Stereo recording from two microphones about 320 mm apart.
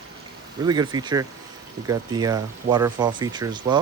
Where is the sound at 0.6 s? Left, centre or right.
Centre.